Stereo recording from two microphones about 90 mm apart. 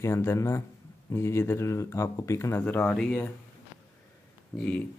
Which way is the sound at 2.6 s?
15° left (ahead or behind).